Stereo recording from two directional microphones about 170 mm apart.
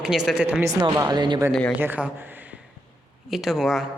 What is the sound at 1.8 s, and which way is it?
A man's voice, 10° right (ahead or behind).